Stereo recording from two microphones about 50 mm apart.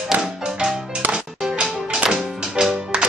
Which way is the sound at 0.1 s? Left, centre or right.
Centre.